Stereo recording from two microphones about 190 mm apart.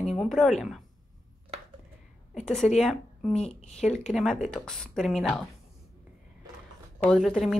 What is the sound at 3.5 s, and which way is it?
Speech, 35° left (ahead or behind).